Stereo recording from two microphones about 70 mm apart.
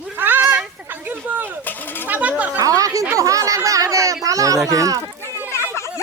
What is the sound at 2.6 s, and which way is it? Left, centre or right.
A child's voice, right.